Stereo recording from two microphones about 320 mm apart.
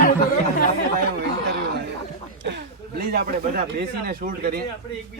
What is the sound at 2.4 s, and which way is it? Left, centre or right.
Speech, right.